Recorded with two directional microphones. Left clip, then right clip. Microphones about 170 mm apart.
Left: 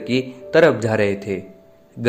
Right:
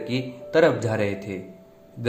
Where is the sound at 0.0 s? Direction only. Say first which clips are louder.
Left 7 dB; 50° left (ahead or behind).